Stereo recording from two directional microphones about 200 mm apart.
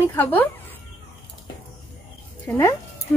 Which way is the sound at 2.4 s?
15° left (ahead or behind).